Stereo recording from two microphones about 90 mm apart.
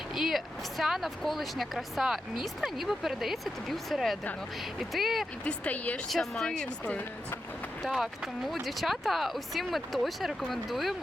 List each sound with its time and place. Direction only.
0.1 s speech: centre (ahead or behind)
5.5 s speech: 15° left (ahead or behind)
6.1 s speech: 5° left (ahead or behind)
7.8 s speech: 5° right (ahead or behind)